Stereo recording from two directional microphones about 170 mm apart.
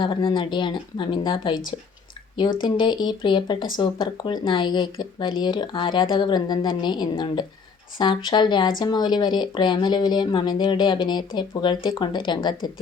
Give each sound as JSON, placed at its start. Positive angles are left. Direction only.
{"t": 0.0, "sound": "speech", "side_deg": 30}
{"t": 2.6, "sound": "speech", "side_deg": 30}